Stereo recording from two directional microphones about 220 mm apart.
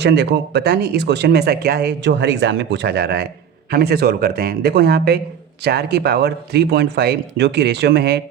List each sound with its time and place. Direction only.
0.0 s speech: 50° right (ahead or behind)